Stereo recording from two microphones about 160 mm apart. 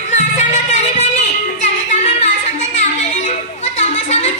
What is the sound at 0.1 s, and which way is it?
Music, 45° left (ahead or behind).